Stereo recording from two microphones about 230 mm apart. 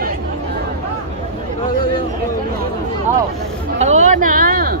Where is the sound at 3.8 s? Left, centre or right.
Right.